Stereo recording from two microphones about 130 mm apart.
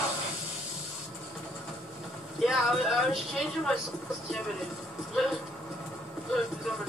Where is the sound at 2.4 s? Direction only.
Centre (ahead or behind).